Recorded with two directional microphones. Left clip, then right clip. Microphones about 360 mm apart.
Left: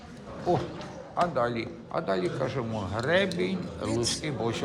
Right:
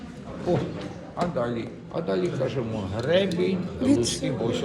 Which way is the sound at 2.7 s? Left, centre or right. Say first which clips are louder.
Right 2 dB; left.